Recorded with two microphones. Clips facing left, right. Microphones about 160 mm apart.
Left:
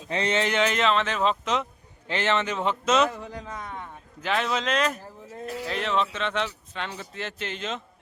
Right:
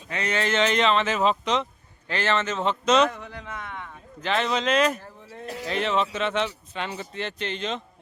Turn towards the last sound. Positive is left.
turn(degrees=5)  # may be behind; listen again after turning